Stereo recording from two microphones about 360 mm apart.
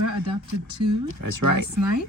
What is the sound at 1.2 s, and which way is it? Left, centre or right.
Speech, right.